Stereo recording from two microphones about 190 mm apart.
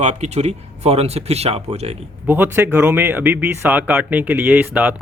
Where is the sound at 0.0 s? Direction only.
40° right (ahead or behind).